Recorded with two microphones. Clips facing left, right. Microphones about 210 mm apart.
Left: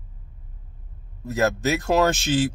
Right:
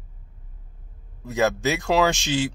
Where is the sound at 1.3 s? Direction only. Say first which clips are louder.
Even; centre (ahead or behind).